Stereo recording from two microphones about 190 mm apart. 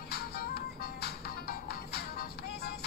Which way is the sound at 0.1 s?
55° left (ahead or behind).